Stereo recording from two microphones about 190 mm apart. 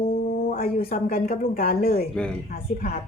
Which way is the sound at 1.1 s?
50° left (ahead or behind).